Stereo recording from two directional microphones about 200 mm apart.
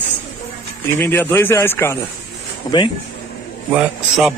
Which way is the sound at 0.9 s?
10° left (ahead or behind).